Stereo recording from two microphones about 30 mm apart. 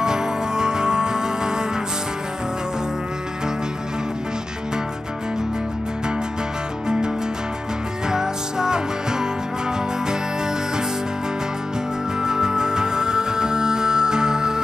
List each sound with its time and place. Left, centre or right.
0.0 s music: right
8.1 s music: right
12.2 s music: right